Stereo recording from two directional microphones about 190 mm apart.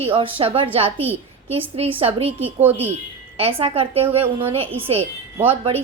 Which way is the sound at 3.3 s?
30° right (ahead or behind).